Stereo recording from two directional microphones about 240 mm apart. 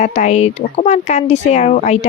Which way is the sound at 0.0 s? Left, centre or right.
Left.